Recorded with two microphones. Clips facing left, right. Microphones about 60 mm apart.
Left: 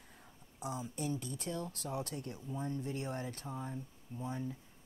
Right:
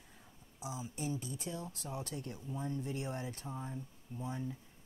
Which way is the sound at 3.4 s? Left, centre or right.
Left.